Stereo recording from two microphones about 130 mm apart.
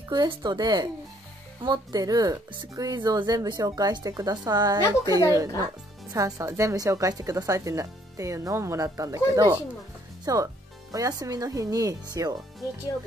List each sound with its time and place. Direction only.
0.1 s speech: 35° right (ahead or behind)